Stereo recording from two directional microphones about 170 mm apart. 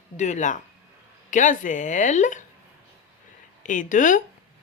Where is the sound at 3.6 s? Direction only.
50° left (ahead or behind).